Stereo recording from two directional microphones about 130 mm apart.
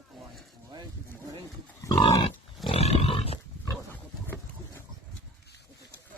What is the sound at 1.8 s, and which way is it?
Pig, 25° left (ahead or behind).